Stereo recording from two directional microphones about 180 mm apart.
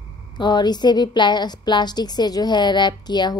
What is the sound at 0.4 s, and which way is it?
A woman's voice, 25° left (ahead or behind).